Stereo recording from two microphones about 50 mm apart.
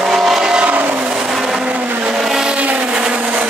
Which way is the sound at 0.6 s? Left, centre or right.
Right.